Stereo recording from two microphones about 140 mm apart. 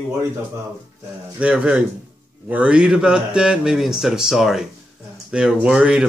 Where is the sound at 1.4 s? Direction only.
5° right (ahead or behind).